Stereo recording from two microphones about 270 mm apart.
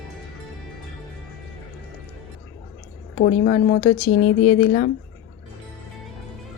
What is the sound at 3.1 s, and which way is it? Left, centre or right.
Speech, left.